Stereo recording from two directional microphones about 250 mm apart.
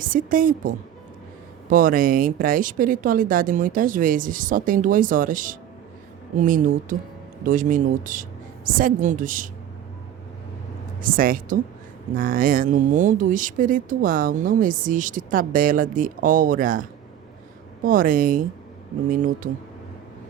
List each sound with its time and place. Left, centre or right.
0.0 s speech: right
11.0 s speech: right
17.8 s speech: right